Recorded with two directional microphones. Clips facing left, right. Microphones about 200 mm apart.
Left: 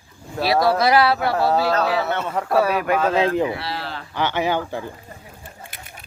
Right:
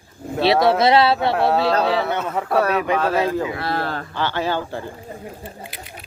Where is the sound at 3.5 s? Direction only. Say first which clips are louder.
Right 5 dB; 50° right (ahead or behind).